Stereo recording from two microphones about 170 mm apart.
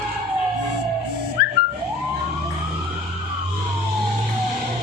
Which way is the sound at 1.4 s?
60° left (ahead or behind).